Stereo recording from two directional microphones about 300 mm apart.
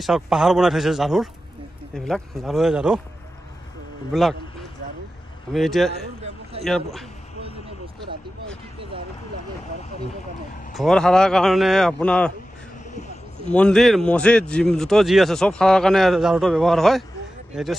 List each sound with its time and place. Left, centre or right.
0.0 s speech: centre
4.1 s speech: centre
5.5 s speech: centre
10.7 s speech: centre
13.5 s speech: centre